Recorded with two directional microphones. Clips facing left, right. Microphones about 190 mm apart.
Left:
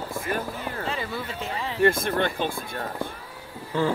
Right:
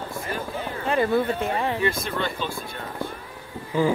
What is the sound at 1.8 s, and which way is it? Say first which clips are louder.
Speech: left 4 dB; 55° left (ahead or behind).